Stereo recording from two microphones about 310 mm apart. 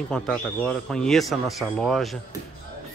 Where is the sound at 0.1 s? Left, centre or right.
Centre.